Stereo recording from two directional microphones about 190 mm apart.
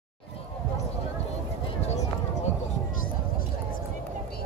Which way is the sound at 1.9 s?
35° left (ahead or behind).